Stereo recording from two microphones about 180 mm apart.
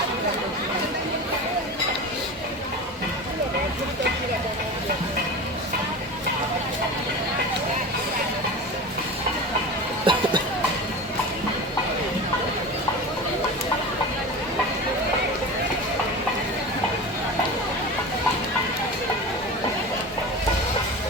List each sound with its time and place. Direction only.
10.1 s music: 30° right (ahead or behind)